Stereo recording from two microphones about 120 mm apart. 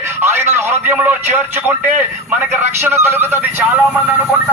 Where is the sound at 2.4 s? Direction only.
15° right (ahead or behind).